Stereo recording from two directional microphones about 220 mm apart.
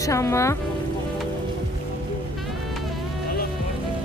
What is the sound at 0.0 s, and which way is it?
Speech, 15° left (ahead or behind).